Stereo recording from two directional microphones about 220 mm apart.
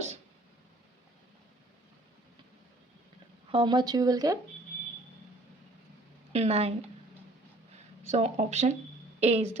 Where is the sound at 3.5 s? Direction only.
20° right (ahead or behind).